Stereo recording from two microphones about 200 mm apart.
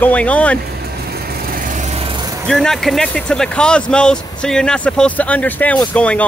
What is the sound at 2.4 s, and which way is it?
Speech, centre (ahead or behind).